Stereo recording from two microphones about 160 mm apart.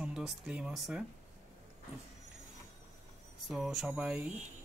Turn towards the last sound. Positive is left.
turn(degrees=-5)  # may be behind; listen again after turning